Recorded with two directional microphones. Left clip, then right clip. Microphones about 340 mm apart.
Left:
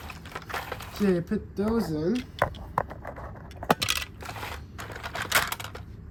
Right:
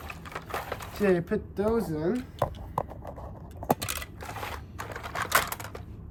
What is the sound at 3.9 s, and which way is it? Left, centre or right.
Typewriter, centre.